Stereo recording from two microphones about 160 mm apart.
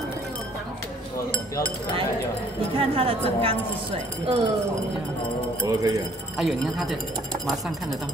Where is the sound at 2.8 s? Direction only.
35° right (ahead or behind).